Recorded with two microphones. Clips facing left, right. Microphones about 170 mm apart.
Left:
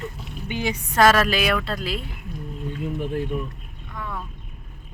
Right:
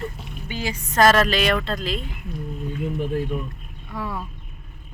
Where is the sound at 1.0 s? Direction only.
5° left (ahead or behind).